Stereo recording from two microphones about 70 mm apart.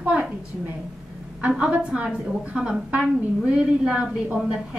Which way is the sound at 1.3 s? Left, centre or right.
Centre.